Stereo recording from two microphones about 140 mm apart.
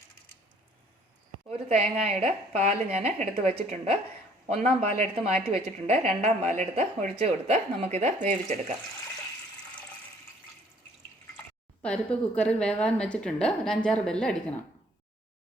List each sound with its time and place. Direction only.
1.7 s a woman's voice: 50° right (ahead or behind)
11.8 s a woman's voice: 10° left (ahead or behind)